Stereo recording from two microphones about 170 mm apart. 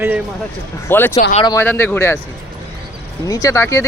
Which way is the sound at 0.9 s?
10° left (ahead or behind).